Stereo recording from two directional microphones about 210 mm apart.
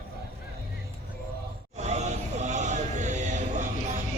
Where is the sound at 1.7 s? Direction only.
30° right (ahead or behind).